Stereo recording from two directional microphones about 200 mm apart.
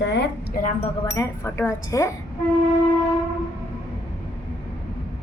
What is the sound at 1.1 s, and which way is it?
A woman's voice, 15° left (ahead or behind).